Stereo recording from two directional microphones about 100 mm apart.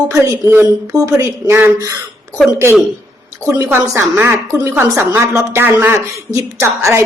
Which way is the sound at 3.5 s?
30° right (ahead or behind).